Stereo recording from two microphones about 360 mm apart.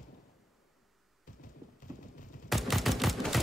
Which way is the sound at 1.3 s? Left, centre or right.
Left.